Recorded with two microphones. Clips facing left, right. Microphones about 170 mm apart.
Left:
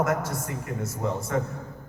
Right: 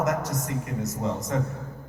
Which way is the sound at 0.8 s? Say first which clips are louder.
Left 1 dB; 40° right (ahead or behind).